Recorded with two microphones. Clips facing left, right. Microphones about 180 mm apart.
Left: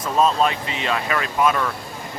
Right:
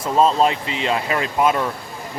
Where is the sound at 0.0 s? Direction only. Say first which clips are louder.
Right 2 dB; 25° right (ahead or behind).